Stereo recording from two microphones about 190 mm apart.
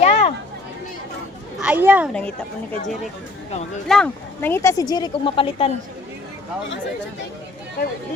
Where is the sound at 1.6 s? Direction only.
5° right (ahead or behind).